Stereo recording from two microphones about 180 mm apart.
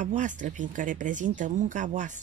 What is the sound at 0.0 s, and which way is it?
Speech, 45° right (ahead or behind).